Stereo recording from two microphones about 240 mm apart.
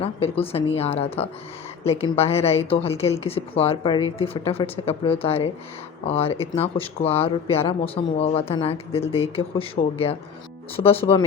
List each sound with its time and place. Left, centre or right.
0.0 s a woman's voice: left